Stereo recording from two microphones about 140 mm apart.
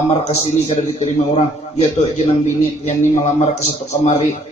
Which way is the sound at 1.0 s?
50° left (ahead or behind).